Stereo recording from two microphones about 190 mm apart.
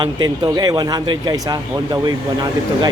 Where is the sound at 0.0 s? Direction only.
20° right (ahead or behind).